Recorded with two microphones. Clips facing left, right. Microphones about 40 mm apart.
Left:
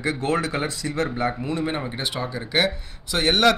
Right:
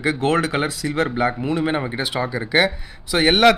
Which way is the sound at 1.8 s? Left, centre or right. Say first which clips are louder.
Right 5 dB; right.